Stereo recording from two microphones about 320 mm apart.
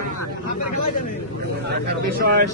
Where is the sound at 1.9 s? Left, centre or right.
Right.